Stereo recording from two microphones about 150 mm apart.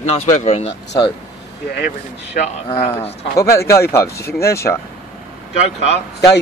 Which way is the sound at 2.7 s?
40° left (ahead or behind).